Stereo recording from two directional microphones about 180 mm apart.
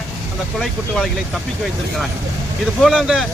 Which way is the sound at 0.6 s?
5° left (ahead or behind).